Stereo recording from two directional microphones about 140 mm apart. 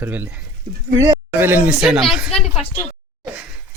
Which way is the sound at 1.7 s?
5° right (ahead or behind).